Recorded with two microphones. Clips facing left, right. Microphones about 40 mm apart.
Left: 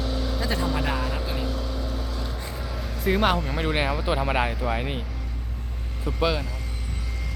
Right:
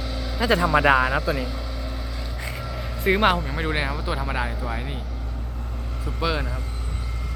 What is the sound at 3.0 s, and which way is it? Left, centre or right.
Speech, centre.